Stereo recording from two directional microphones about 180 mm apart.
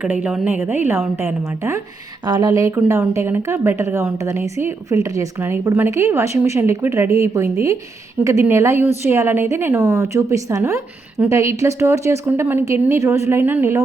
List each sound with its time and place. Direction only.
0.0 s a woman's voice: 5° right (ahead or behind)